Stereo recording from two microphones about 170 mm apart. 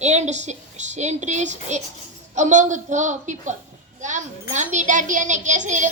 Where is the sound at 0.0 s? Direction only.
40° right (ahead or behind).